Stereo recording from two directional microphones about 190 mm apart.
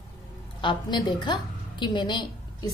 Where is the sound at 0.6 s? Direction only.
25° left (ahead or behind).